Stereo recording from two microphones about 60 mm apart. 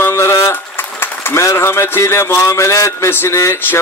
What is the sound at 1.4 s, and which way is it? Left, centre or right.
A man's voice, left.